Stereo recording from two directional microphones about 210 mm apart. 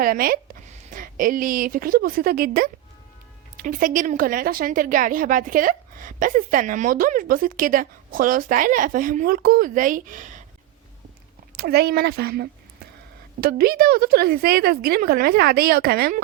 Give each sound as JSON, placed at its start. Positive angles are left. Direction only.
{"t": 0.0, "sound": "a woman's voice", "side_deg": -45}
{"t": 11.5, "sound": "a woman's voice", "side_deg": -50}